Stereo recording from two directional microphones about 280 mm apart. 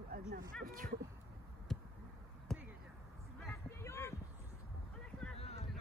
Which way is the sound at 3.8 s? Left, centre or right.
Centre.